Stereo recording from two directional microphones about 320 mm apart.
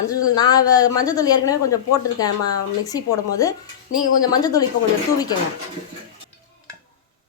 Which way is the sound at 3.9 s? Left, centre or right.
Left.